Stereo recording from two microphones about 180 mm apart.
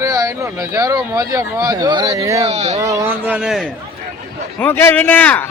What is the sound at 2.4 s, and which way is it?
Speech, 35° right (ahead or behind).